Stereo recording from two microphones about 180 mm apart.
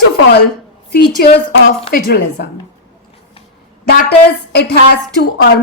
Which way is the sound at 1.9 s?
60° left (ahead or behind).